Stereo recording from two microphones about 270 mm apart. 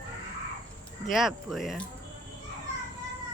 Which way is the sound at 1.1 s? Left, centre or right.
Centre.